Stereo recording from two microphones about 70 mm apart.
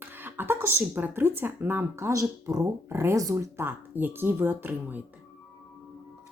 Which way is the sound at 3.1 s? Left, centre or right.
Right.